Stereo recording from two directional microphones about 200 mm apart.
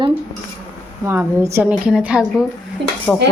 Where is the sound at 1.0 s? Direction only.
10° right (ahead or behind).